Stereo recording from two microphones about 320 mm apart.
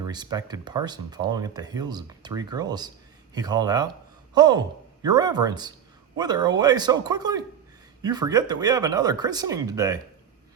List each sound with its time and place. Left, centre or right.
0.0 s speech: centre